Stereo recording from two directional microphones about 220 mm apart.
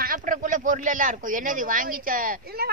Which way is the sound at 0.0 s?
40° right (ahead or behind).